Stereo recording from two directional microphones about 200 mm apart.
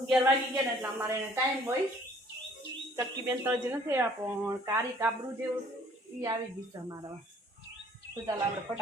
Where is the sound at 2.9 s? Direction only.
10° right (ahead or behind).